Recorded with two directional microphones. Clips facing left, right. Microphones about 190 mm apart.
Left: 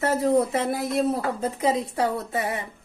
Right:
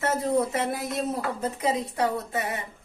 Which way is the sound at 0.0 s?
30° left (ahead or behind).